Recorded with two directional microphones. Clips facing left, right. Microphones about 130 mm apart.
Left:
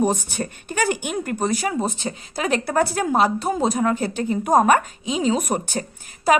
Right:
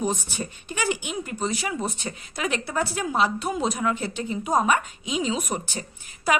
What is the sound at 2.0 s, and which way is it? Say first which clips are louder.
Speech: left 4 dB; 35° left (ahead or behind).